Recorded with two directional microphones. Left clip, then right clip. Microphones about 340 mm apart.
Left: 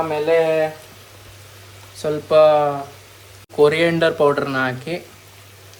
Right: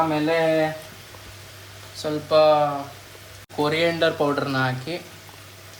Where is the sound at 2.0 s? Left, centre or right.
Centre.